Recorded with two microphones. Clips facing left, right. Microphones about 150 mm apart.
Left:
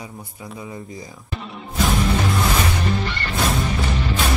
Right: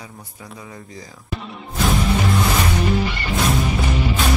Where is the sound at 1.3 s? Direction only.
Centre (ahead or behind).